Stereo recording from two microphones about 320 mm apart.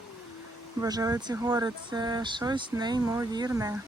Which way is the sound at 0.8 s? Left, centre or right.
Centre.